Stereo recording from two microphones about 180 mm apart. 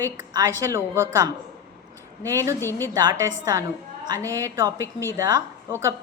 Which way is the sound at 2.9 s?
20° right (ahead or behind).